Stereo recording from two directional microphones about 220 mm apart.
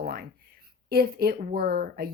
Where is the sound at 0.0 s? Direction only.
45° right (ahead or behind).